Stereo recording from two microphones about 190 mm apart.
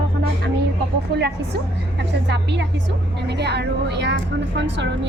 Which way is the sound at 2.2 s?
65° right (ahead or behind).